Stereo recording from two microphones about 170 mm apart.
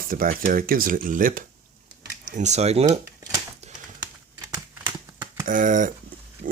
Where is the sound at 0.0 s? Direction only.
55° right (ahead or behind); by 3.0 s 40° right (ahead or behind).